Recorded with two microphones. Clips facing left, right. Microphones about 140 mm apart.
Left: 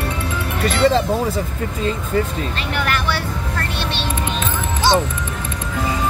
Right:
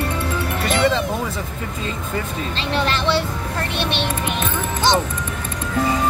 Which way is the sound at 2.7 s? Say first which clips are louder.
Right 4 dB; 25° right (ahead or behind).